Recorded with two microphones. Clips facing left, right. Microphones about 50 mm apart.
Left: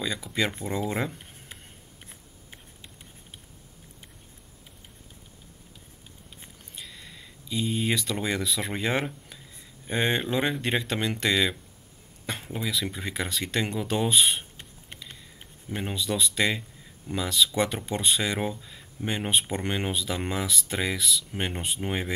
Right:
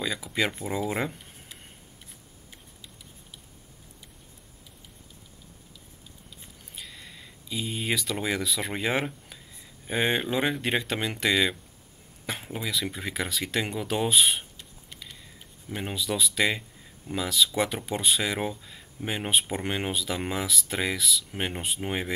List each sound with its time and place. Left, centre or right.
0.0 s speech: centre
2.5 s a sound: left
6.7 s speech: centre
15.7 s speech: centre